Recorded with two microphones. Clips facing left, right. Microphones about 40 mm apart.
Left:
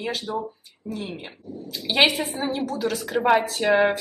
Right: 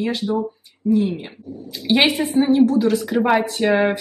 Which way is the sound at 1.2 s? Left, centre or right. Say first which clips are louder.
Right 2 dB; centre.